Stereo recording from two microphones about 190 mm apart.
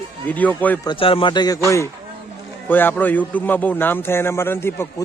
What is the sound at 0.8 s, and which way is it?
Speech, 25° left (ahead or behind).